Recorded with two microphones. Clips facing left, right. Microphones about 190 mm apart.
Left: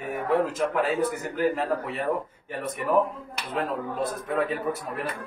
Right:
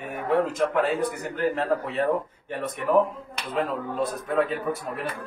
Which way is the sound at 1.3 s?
10° left (ahead or behind).